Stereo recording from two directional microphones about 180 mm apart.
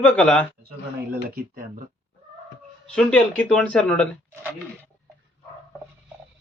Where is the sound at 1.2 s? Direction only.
55° right (ahead or behind).